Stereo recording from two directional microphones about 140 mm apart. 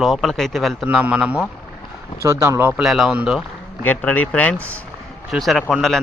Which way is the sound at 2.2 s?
20° right (ahead or behind).